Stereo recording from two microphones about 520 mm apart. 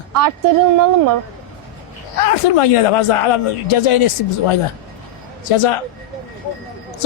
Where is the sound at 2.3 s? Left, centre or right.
Left.